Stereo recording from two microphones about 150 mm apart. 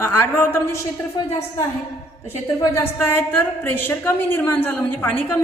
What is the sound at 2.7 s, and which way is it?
A woman's voice, 15° left (ahead or behind).